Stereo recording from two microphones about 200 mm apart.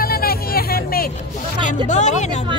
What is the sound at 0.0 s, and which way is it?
Vehicle, 50° left (ahead or behind).